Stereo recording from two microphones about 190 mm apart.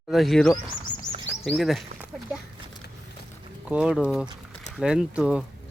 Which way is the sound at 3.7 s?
5° right (ahead or behind).